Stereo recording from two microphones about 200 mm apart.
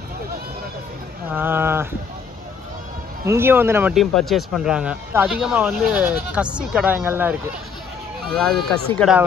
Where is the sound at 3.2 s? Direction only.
10° right (ahead or behind).